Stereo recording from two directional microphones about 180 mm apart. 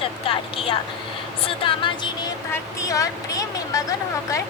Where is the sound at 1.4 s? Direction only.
30° left (ahead or behind).